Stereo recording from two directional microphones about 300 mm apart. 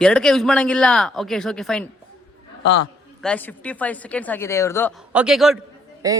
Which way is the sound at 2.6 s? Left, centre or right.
Left.